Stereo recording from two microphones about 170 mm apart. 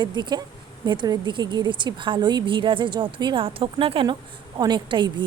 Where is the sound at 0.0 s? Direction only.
25° right (ahead or behind).